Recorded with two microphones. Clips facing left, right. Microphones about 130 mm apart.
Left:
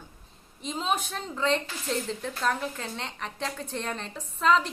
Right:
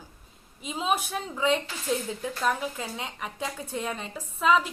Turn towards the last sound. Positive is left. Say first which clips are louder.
# even
turn(degrees=-5)  # may be behind; listen again after turning